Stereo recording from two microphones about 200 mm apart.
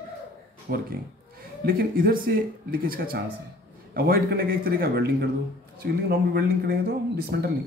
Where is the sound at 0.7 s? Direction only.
50° right (ahead or behind).